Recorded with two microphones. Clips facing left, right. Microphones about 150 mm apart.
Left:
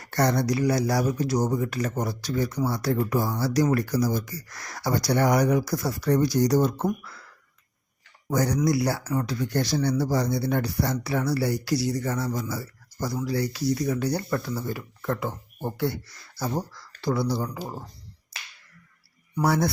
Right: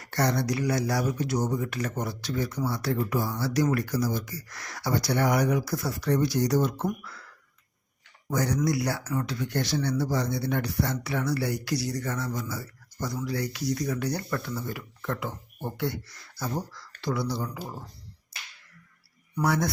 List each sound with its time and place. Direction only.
0.0 s speech: 45° left (ahead or behind)
8.3 s speech: 40° left (ahead or behind)
17.0 s speech: 35° left (ahead or behind)
19.4 s speech: 30° left (ahead or behind)